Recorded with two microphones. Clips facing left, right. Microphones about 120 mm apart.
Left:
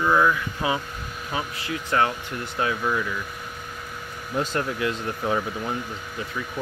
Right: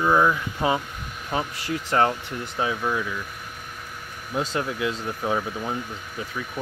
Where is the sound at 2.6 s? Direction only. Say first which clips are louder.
Left 1 dB; 15° right (ahead or behind).